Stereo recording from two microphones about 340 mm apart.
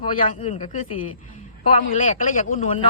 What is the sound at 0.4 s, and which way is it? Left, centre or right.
Speech, centre.